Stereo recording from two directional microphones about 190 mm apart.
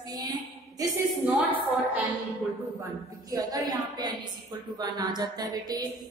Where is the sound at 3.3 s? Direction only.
20° right (ahead or behind).